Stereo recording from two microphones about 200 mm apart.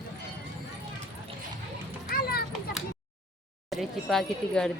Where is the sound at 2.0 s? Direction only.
50° left (ahead or behind).